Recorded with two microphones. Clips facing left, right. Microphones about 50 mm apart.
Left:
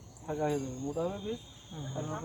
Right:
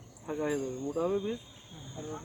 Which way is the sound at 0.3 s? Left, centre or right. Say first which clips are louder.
Even; centre.